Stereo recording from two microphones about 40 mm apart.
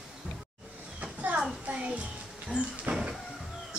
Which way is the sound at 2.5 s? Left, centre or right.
Left.